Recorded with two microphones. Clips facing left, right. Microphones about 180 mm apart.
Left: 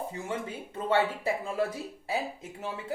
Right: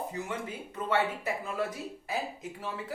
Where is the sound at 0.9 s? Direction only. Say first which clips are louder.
Left 3 dB; 30° left (ahead or behind).